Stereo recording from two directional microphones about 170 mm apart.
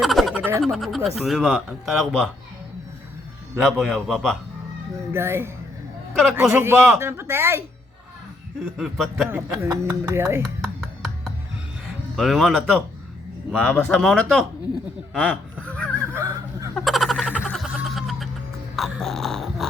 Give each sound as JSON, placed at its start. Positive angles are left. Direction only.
{"t": 0.0, "sound": "a sound", "side_deg": 0}
{"t": 0.6, "sound": "speech", "side_deg": 0}
{"t": 3.6, "sound": "speech", "side_deg": 0}
{"t": 5.1, "sound": "speech", "side_deg": -15}
{"t": 8.8, "sound": "speech", "side_deg": 0}
{"t": 9.3, "sound": "speech", "side_deg": -10}
{"t": 10.6, "sound": "music", "side_deg": 0}
{"t": 12.1, "sound": "speech", "side_deg": 0}
{"t": 15.1, "sound": "honk", "side_deg": 5}
{"t": 16.0, "sound": "a sound", "side_deg": -15}
{"t": 16.7, "sound": "a sound", "side_deg": 0}